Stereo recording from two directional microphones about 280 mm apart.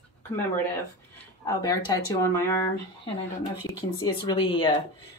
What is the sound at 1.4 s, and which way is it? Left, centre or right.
Speech, centre.